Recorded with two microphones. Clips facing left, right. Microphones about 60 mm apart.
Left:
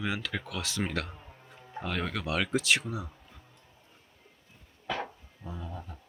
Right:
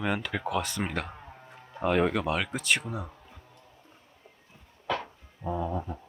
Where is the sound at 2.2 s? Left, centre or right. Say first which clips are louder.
Even; centre.